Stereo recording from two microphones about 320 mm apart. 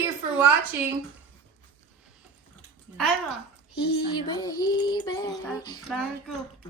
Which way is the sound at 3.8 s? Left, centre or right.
Centre.